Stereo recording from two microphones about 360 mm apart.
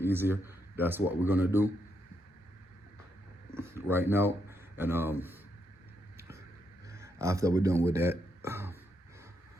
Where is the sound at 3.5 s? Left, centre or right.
Centre.